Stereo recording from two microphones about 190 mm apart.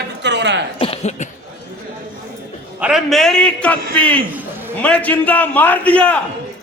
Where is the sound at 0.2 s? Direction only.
65° right (ahead or behind).